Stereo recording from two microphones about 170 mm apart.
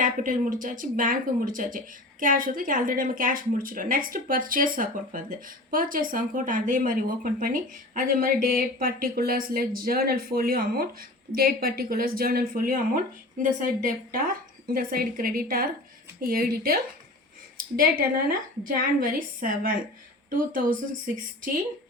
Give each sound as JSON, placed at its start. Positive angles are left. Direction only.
{"t": 0.0, "sound": "speech", "side_deg": -50}
{"t": 17.7, "sound": "a woman's voice", "side_deg": -60}